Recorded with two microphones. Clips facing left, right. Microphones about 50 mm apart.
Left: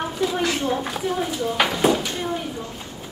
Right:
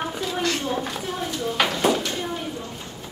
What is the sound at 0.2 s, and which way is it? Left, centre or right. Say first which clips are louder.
Speech: left 5 dB; centre.